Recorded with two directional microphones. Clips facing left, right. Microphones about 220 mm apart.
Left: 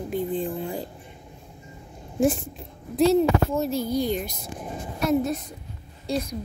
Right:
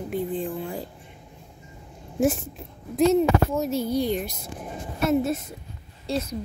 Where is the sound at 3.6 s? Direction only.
35° left (ahead or behind).